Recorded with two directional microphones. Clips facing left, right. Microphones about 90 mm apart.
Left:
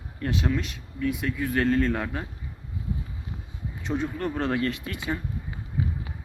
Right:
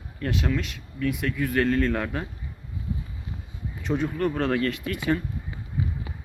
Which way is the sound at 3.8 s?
30° left (ahead or behind).